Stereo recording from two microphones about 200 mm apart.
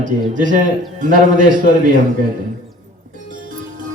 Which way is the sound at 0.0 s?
40° right (ahead or behind).